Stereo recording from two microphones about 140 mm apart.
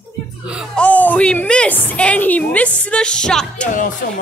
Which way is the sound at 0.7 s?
10° left (ahead or behind).